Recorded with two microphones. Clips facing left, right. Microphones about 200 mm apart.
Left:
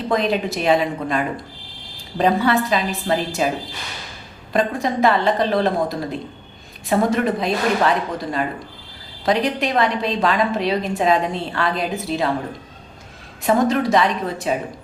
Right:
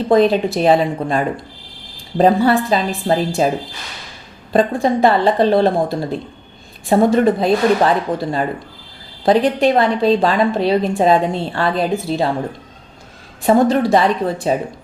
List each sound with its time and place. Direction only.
0.1 s a woman's voice: 30° right (ahead or behind)
4.5 s a woman's voice: 30° right (ahead or behind)
13.4 s a woman's voice: 30° right (ahead or behind)